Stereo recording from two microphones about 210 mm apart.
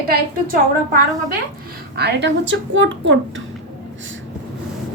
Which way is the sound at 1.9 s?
50° right (ahead or behind).